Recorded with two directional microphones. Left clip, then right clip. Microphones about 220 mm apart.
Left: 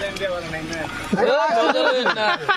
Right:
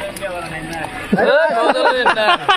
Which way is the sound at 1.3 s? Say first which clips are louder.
Right 4 dB; 15° right (ahead or behind).